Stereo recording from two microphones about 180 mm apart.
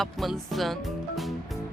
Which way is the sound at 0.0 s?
Centre (ahead or behind).